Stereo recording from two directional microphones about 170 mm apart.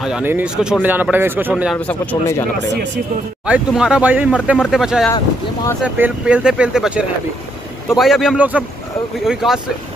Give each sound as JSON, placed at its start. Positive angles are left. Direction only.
{"t": 0.0, "sound": "speech", "side_deg": -10}
{"t": 1.8, "sound": "speech", "side_deg": 10}
{"t": 2.6, "sound": "speech", "side_deg": -90}
{"t": 3.4, "sound": "speech", "side_deg": -5}
{"t": 5.1, "sound": "speech", "side_deg": 20}
{"t": 5.9, "sound": "speech", "side_deg": -10}